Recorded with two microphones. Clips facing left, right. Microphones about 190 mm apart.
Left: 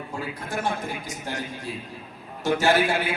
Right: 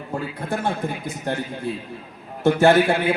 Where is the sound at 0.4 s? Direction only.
60° right (ahead or behind).